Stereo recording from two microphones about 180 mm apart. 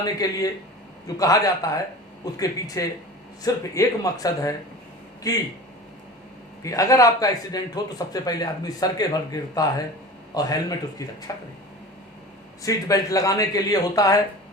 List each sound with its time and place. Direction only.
0.0 s a man's voice: 20° left (ahead or behind)
6.6 s a man's voice: 20° left (ahead or behind)
12.6 s a man's voice: 20° left (ahead or behind)